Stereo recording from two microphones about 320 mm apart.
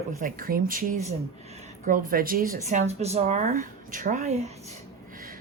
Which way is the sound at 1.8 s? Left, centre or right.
Right.